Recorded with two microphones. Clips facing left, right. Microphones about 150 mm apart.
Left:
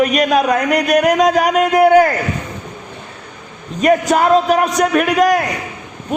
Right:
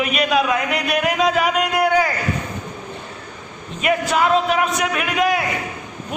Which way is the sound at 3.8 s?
40° left (ahead or behind).